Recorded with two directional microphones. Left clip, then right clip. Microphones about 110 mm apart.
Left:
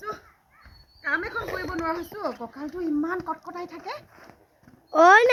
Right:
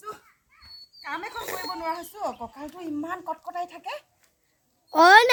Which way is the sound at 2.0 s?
45° right (ahead or behind).